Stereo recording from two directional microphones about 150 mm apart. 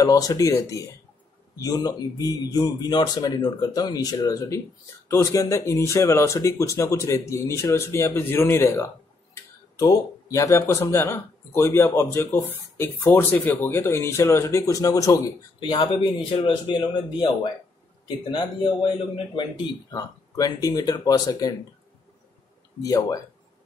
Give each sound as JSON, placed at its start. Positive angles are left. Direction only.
{"t": 0.0, "sound": "speech", "side_deg": 25}
{"t": 22.8, "sound": "speech", "side_deg": 20}